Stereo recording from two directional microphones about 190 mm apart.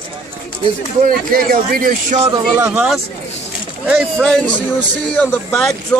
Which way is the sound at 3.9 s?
5° left (ahead or behind).